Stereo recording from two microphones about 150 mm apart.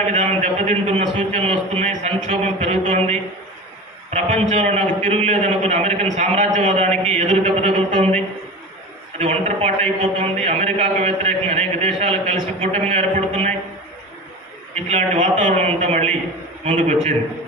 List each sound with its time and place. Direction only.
0.1 s a man's voice: 50° right (ahead or behind)
14.8 s a man's voice: 50° right (ahead or behind)